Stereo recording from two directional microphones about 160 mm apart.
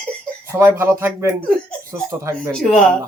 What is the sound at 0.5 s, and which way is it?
Speech, 15° right (ahead or behind).